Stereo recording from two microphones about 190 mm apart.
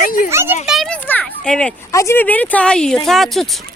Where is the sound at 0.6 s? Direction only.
Centre (ahead or behind).